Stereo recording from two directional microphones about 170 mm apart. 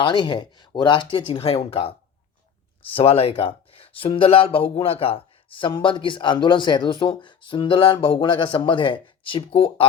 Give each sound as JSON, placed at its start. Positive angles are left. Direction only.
{"t": 0.0, "sound": "speech", "side_deg": 25}